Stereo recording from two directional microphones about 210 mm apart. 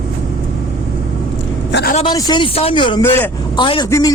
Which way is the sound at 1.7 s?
55° left (ahead or behind).